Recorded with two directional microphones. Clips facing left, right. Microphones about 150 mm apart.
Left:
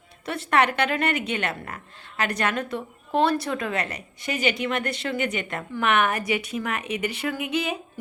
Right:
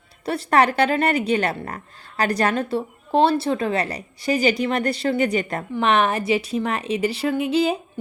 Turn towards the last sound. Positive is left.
turn(degrees=-30)  # may be behind; listen again after turning